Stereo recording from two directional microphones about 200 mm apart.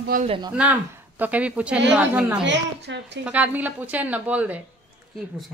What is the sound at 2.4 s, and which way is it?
Speech, 60° right (ahead or behind).